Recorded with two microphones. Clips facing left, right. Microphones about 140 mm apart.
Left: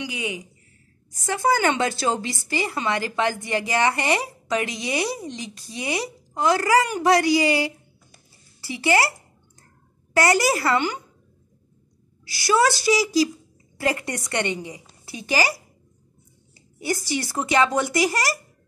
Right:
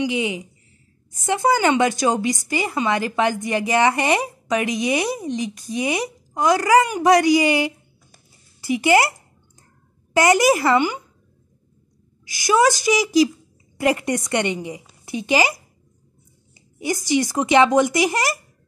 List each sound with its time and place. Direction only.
0.0 s a woman's voice: 25° right (ahead or behind)
10.1 s a woman's voice: 20° right (ahead or behind)
12.3 s a woman's voice: 15° right (ahead or behind)